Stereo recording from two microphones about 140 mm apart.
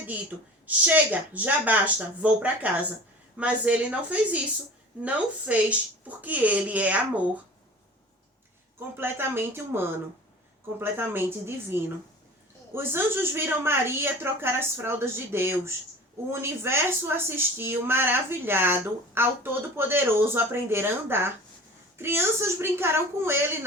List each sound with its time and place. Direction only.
0.0 s a woman's voice: 10° right (ahead or behind)
9.0 s a woman's voice: 15° right (ahead or behind)